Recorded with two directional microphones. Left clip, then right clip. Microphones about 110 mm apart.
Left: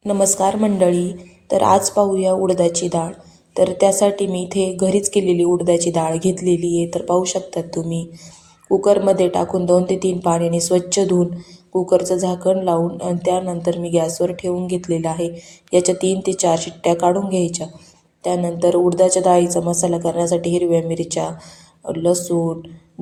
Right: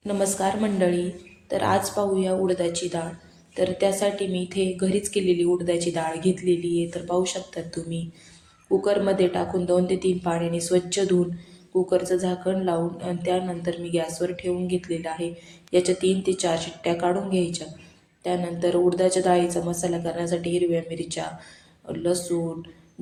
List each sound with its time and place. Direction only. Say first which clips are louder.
0.0 s a woman's voice: left 8 dB; 40° left (ahead or behind)